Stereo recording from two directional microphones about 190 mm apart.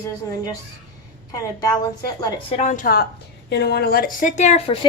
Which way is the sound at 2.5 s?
35° left (ahead or behind).